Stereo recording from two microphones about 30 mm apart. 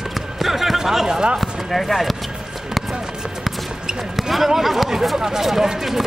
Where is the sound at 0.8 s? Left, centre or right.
Centre.